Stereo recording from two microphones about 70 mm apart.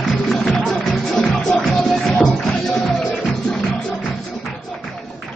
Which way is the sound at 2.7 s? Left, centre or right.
Centre.